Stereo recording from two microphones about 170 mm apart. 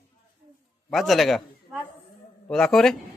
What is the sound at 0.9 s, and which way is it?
A man's voice, centre (ahead or behind).